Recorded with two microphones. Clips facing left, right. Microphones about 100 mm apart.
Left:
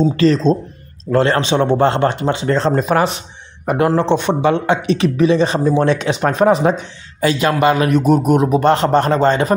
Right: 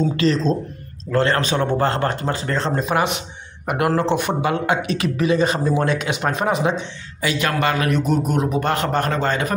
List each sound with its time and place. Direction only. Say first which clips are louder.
0.0 s speech: left 5 dB; 35° left (ahead or behind)
7.3 s speech: left 6 dB; 20° left (ahead or behind)